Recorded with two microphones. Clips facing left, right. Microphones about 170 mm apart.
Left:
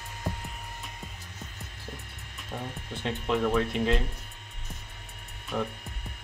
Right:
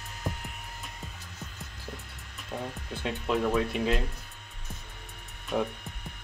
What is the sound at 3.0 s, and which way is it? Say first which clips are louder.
Speech: left 1 dB; 10° right (ahead or behind).